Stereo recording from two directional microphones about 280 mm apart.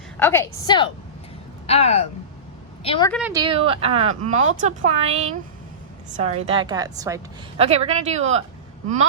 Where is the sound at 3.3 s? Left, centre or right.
Centre.